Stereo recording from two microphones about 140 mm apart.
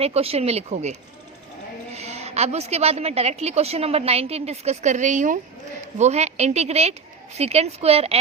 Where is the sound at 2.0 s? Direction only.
50° right (ahead or behind).